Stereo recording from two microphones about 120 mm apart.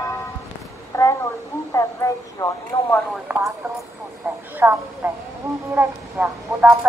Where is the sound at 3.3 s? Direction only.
20° right (ahead or behind).